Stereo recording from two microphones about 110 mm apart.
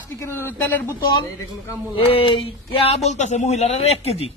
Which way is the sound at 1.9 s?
60° left (ahead or behind).